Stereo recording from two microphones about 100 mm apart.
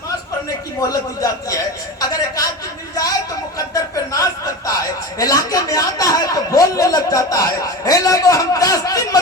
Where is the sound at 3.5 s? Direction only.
35° left (ahead or behind).